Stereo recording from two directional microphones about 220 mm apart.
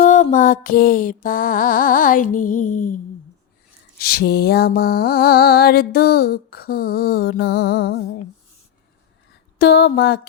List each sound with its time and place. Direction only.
0.0 s music: 35° left (ahead or behind)
3.9 s mantra: 45° left (ahead or behind)
9.6 s mantra: 45° left (ahead or behind)